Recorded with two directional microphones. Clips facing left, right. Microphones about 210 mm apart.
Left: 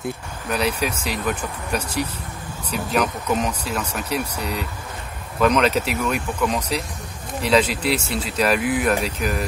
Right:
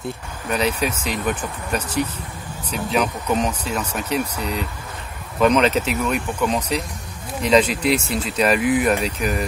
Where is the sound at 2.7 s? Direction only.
Centre (ahead or behind).